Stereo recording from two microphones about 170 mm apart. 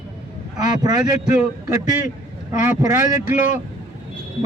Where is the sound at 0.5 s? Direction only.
20° right (ahead or behind).